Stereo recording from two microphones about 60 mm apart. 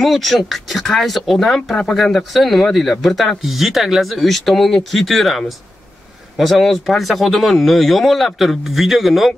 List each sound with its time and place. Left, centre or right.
0.0 s speech: centre